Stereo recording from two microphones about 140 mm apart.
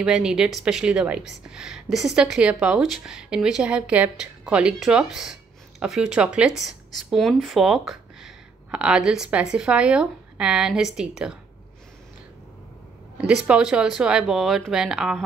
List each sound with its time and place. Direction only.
0.0 s a woman's voice: 5° right (ahead or behind)
13.2 s a woman's voice: 5° right (ahead or behind)